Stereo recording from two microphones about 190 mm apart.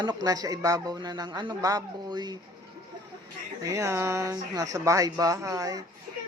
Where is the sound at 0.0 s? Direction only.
20° right (ahead or behind).